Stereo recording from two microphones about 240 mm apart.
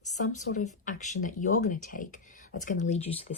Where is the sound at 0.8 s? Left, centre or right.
Left.